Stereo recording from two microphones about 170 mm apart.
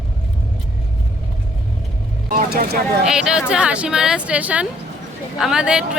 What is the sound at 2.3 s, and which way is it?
Speech, 55° right (ahead or behind).